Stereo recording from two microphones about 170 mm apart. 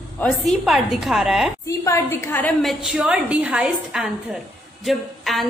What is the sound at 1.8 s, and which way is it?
Speech, 15° left (ahead or behind).